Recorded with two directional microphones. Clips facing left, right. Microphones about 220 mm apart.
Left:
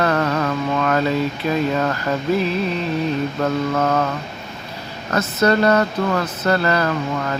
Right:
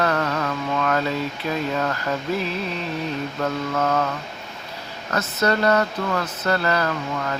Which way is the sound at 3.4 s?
45° left (ahead or behind).